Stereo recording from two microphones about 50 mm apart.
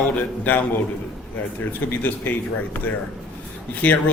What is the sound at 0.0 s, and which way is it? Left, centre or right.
A man's voice, left.